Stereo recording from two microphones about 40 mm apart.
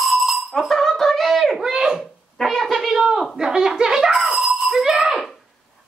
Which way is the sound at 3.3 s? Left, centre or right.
Centre.